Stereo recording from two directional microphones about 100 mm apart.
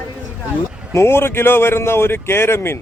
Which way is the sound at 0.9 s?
25° left (ahead or behind).